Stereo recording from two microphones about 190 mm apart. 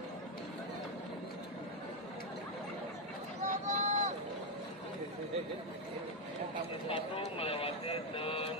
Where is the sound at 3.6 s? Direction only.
40° right (ahead or behind).